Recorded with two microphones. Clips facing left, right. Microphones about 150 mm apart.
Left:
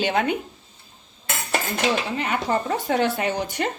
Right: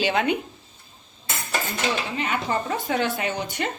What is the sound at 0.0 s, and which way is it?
Speech, 40° left (ahead or behind).